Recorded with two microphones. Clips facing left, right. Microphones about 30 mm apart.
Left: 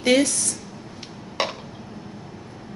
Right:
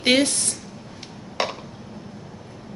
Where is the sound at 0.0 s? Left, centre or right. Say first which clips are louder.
Even; right.